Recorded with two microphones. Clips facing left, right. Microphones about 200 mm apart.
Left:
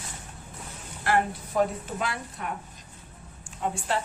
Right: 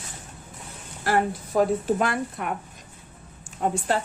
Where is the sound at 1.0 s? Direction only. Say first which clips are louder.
Right 2 dB; 40° right (ahead or behind); by 2.5 s 55° right (ahead or behind).